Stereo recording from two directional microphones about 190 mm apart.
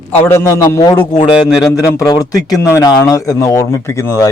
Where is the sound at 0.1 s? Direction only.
15° left (ahead or behind).